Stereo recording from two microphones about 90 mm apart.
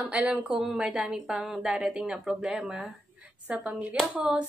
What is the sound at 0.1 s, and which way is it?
Speech, 10° right (ahead or behind).